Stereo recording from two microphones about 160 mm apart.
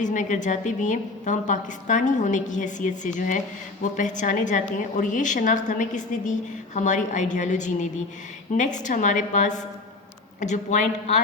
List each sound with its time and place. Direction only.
0.0 s a woman's voice: 50° left (ahead or behind)